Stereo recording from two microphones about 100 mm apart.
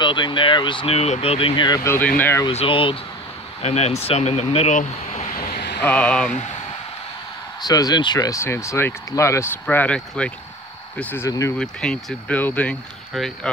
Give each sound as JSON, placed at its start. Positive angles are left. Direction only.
{"t": 0.0, "sound": "speech", "side_deg": 55}
{"t": 0.8, "sound": "speech", "side_deg": 90}
{"t": 1.9, "sound": "speech", "side_deg": 20}
{"t": 2.5, "sound": "speech", "side_deg": 65}
{"t": 3.6, "sound": "speech", "side_deg": 90}
{"t": 5.9, "sound": "speech", "side_deg": 10}
{"t": 7.6, "sound": "speech", "side_deg": 40}
{"t": 9.7, "sound": "speech", "side_deg": 15}
{"t": 11.2, "sound": "speech", "side_deg": 35}
{"t": 11.5, "sound": "speech", "side_deg": 5}
{"t": 13.1, "sound": "speech", "side_deg": 5}